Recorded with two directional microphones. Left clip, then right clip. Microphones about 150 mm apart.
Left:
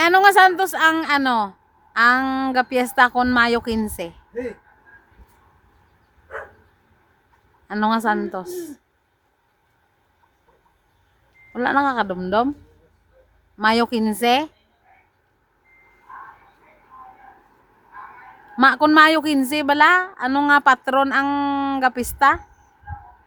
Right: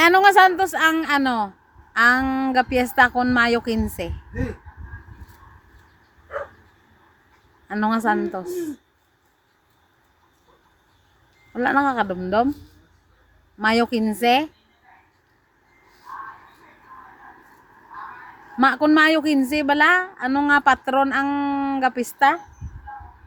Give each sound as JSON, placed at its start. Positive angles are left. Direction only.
{"t": 0.0, "sound": "a woman's voice", "side_deg": 15}
{"t": 2.2, "sound": "a woman's voice", "side_deg": 30}
{"t": 7.7, "sound": "a woman's voice", "side_deg": 20}
{"t": 11.5, "sound": "a woman's voice", "side_deg": 20}
{"t": 13.6, "sound": "a woman's voice", "side_deg": 25}
{"t": 18.5, "sound": "a woman's voice", "side_deg": 30}